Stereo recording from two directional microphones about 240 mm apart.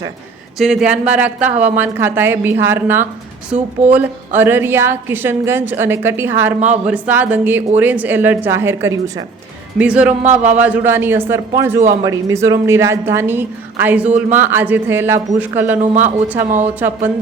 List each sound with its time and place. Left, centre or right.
0.6 s a woman's voice: centre
15.8 s speech: right
16.6 s a woman's voice: centre